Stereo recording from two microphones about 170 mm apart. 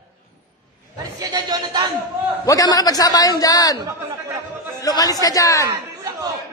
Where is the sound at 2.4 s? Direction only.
20° left (ahead or behind).